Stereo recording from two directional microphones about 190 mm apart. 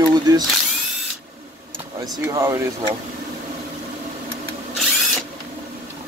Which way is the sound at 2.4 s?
15° right (ahead or behind).